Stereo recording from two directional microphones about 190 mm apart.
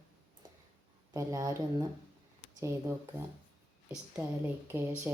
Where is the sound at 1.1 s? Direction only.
15° right (ahead or behind).